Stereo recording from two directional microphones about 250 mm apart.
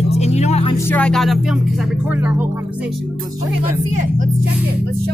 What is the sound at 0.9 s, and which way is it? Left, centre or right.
Speech, centre.